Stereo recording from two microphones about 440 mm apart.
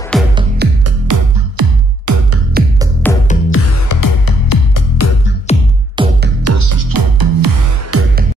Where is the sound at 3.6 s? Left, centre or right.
Left.